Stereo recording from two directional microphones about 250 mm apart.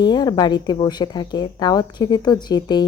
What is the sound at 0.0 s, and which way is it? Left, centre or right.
Speech, centre.